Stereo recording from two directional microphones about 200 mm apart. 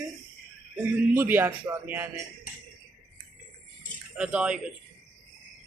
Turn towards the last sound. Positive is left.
turn(degrees=-5)  # may be behind; listen again after turning